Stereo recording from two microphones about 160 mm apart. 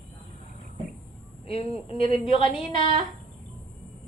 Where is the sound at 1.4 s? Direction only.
35° left (ahead or behind).